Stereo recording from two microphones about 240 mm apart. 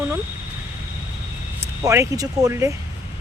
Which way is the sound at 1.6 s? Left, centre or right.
Centre.